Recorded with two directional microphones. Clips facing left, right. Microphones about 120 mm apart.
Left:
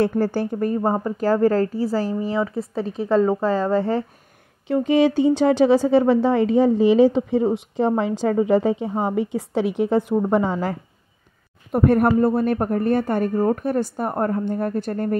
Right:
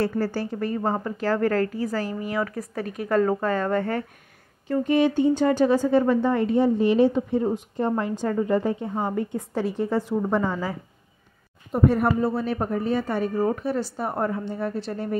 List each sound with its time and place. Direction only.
0.3 s a woman's voice: 55° left (ahead or behind); by 4.0 s 25° left (ahead or behind)
4.6 s a woman's voice: 80° left
10.3 s speech: 25° left (ahead or behind)
11.7 s a woman's voice: 60° left (ahead or behind)